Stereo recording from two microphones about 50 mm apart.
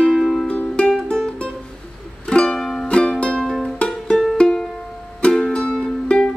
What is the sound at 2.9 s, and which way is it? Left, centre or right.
Music, centre.